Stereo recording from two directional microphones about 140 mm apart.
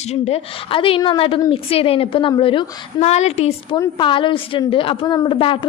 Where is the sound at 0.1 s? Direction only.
50° left (ahead or behind).